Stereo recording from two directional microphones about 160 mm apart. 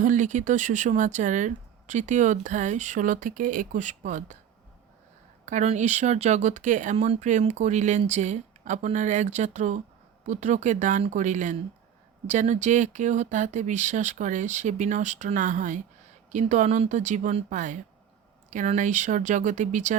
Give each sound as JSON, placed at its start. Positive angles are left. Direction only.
{"t": 0.0, "sound": "speech", "side_deg": -50}
{"t": 5.5, "sound": "speech", "side_deg": -50}